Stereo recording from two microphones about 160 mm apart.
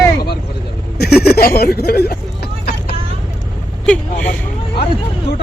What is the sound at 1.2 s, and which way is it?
Speech, 75° left (ahead or behind).